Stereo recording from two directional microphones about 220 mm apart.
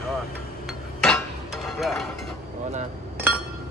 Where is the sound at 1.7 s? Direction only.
Centre (ahead or behind).